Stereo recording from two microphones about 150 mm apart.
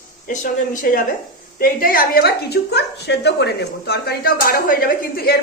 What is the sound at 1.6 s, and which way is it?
A woman's voice, 70° left (ahead or behind).